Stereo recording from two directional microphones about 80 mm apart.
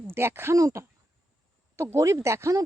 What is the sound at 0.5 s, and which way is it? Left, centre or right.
Speech, right.